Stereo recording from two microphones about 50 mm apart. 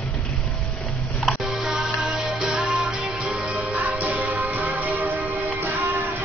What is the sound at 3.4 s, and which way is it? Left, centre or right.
Music, right.